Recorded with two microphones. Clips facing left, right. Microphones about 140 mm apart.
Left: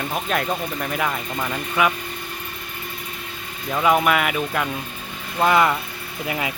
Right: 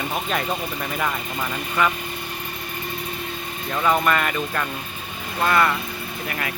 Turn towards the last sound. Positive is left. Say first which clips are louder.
# left 2 dB
turn(degrees=20)  # may be behind; listen again after turning